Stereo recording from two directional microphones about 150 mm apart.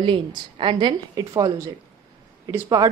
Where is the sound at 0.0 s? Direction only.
35° right (ahead or behind).